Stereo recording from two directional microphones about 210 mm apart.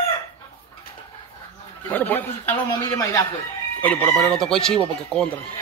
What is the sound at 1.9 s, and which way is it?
Chicken, 10° left (ahead or behind).